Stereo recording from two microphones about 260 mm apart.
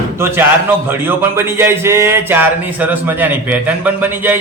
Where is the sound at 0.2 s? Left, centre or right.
Centre.